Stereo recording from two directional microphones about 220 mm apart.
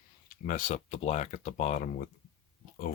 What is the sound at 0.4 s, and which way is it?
Speech, 35° left (ahead or behind).